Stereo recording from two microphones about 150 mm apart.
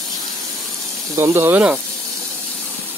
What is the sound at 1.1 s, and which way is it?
Speech, 15° right (ahead or behind).